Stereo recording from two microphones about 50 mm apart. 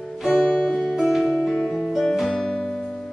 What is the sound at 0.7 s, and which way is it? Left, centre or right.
Music, centre.